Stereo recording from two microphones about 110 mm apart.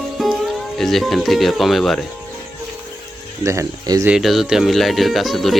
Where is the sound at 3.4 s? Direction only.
30° right (ahead or behind).